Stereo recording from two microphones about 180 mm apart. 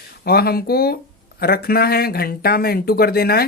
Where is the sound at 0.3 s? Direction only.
60° left (ahead or behind).